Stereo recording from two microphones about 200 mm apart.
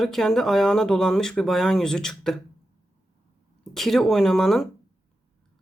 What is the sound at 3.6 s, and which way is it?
Speech, centre (ahead or behind).